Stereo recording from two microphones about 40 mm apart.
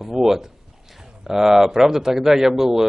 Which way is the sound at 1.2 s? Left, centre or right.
Centre.